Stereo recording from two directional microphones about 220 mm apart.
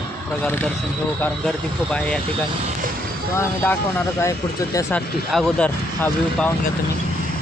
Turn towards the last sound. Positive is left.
turn(degrees=5)  # may be behind; listen again after turning